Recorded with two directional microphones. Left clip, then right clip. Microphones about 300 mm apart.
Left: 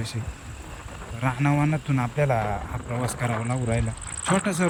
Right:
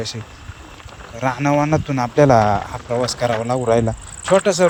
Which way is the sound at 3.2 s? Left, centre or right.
Centre.